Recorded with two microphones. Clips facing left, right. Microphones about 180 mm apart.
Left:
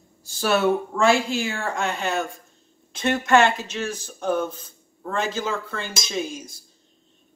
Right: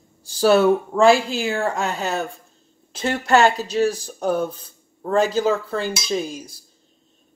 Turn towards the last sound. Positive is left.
turn(degrees=-35)  # may be behind; listen again after turning